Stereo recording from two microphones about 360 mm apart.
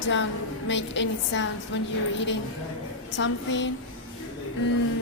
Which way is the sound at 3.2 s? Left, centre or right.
Left.